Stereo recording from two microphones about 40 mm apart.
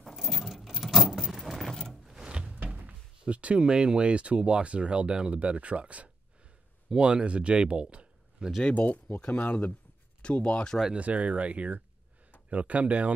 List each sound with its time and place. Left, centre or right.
0.1 s a sound: centre
2.1 s a sound: right
2.5 s door: right
3.3 s speech: right
6.9 s speech: right
8.7 s speech: left
10.2 s speech: left
11.0 s speech: right